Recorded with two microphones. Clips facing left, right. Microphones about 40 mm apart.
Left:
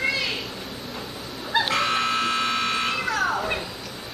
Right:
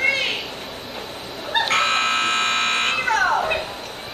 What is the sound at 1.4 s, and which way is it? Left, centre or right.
Buzzer, right.